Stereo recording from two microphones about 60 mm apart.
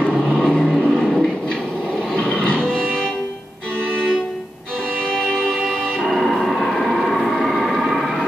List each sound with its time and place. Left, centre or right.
0.2 s vehicle: centre
2.1 s music: centre
5.6 s music: centre